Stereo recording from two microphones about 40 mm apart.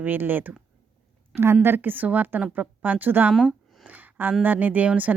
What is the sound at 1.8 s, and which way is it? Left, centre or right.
A woman's voice, right.